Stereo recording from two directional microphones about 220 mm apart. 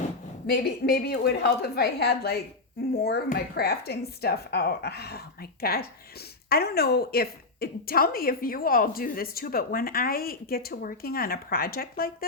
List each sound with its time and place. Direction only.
0.4 s speech: 45° left (ahead or behind)